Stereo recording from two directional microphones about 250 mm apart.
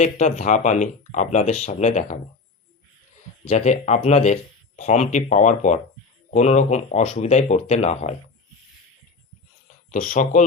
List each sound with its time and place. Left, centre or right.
0.0 s speech: left
3.4 s speech: left
9.9 s speech: left